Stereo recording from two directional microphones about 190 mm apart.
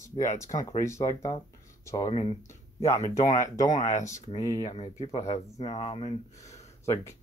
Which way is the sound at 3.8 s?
40° left (ahead or behind).